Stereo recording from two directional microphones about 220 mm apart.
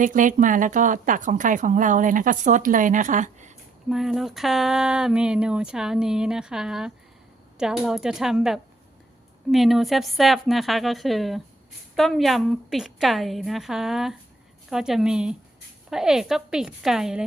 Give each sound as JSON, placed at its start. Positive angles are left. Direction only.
{"t": 0.0, "sound": "a woman's voice", "side_deg": -35}
{"t": 3.8, "sound": "speech", "side_deg": 0}